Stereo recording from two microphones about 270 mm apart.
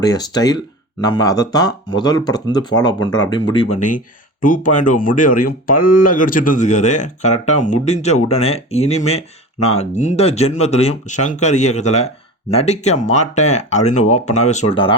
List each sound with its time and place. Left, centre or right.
0.0 s speech: centre